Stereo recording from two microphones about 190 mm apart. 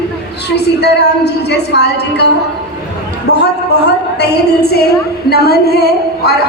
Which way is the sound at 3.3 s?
60° left (ahead or behind).